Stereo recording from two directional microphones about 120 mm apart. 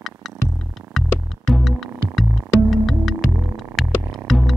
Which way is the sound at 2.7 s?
Centre (ahead or behind).